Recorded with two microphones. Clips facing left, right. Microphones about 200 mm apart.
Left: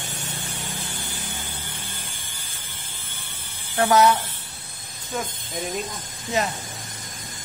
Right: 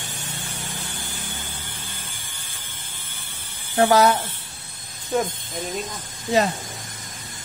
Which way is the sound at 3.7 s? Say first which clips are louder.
Right 1 dB; 35° right (ahead or behind).